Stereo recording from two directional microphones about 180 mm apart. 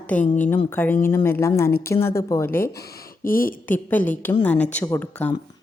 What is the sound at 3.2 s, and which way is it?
Speech, 50° left (ahead or behind).